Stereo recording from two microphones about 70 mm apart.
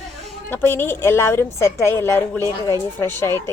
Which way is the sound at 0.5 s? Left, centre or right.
Left.